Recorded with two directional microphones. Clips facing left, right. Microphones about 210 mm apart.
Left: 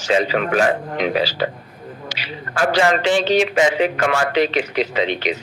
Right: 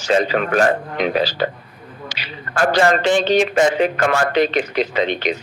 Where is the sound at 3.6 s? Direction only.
45° right (ahead or behind).